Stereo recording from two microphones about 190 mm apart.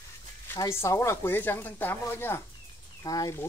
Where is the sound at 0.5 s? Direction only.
15° left (ahead or behind).